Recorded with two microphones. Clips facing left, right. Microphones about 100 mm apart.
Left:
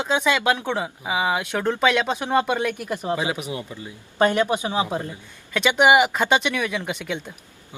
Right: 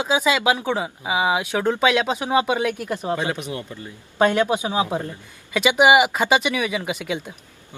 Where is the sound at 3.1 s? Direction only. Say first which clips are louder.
Even; 10° left (ahead or behind).